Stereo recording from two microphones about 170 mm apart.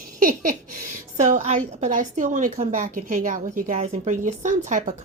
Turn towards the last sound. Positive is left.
turn(degrees=-50)  # may be behind; listen again after turning